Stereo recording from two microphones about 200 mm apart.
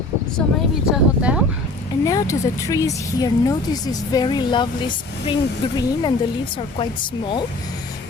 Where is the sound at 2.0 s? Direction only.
15° left (ahead or behind).